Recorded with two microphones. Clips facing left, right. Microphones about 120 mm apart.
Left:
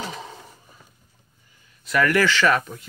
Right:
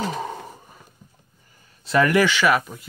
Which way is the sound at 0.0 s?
50° right (ahead or behind).